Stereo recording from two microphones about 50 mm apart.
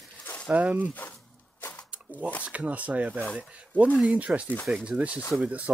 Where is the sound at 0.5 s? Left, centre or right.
Right.